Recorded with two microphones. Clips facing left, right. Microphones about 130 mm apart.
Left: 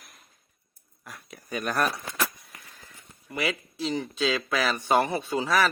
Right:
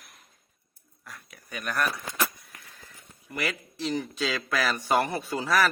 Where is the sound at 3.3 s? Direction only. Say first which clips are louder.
Left 2 dB; 5° left (ahead or behind).